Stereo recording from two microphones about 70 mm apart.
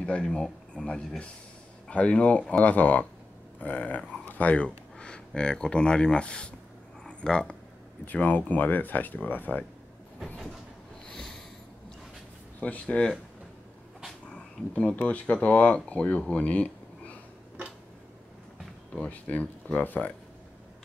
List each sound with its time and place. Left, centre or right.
0.0 s speech: centre
8.0 s speech: left
11.1 s sniff: centre
12.5 s speech: left
14.3 s a sound: centre
15.0 s speech: centre
18.9 s speech: left